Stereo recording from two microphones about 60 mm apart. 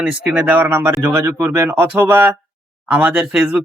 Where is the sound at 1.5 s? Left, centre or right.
Right.